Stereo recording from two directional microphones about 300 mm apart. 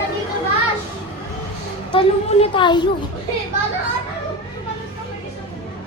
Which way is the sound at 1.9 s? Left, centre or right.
Centre.